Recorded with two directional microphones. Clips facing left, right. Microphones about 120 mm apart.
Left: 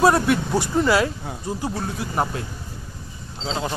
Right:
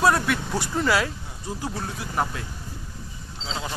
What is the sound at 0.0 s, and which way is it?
Speech, 30° left (ahead or behind).